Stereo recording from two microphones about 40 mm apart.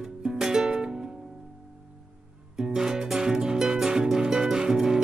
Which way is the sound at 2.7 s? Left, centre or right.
Centre.